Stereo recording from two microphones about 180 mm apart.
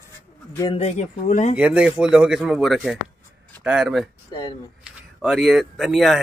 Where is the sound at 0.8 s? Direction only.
40° left (ahead or behind).